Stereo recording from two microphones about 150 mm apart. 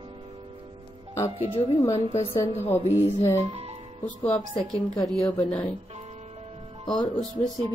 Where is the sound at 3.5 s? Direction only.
45° right (ahead or behind).